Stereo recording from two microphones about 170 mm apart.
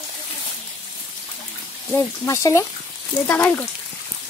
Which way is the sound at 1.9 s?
15° left (ahead or behind).